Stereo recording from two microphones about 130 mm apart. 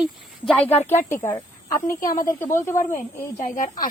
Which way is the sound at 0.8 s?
15° left (ahead or behind).